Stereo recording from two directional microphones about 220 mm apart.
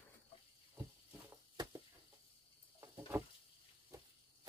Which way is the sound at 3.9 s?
15° right (ahead or behind).